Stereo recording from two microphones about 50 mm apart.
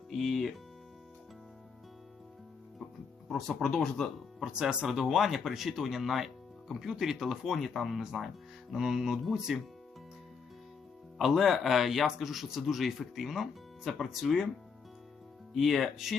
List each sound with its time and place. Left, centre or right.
0.1 s speech: centre
3.2 s speech: centre
3.8 s speech: centre
4.5 s speech: centre
4.9 s speech: centre
11.2 s speech: centre
15.5 s speech: centre